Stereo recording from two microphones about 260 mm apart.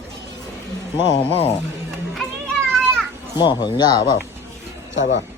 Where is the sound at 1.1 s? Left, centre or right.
Left.